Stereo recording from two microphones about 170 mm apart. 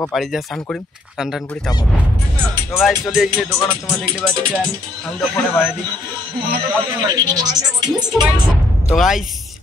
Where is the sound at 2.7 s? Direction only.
Centre (ahead or behind).